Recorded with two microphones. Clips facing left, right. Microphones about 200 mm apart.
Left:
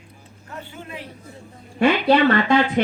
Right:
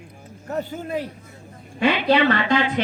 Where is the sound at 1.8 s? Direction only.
45° left (ahead or behind).